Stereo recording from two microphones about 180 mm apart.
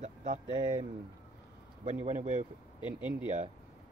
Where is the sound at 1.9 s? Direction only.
40° right (ahead or behind).